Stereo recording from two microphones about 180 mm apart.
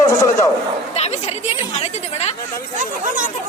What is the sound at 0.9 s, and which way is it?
Speech, 35° left (ahead or behind).